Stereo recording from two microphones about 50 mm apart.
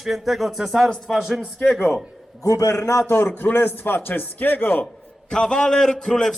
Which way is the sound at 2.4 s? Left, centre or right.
Left.